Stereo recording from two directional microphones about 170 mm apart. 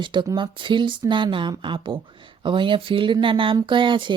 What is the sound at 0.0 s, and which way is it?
Speech, 25° right (ahead or behind).